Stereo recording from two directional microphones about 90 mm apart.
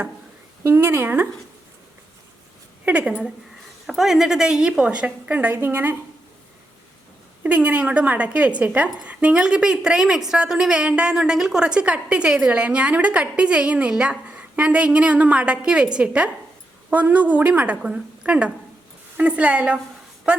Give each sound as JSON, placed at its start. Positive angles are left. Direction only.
{"t": 0.6, "sound": "speech", "side_deg": -25}
{"t": 2.8, "sound": "a woman's voice", "side_deg": -15}
{"t": 7.4, "sound": "a woman's voice", "side_deg": -15}